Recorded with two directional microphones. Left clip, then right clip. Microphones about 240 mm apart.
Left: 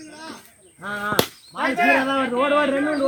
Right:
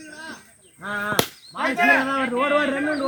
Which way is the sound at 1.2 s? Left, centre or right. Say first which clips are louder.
Left 1 dB; centre.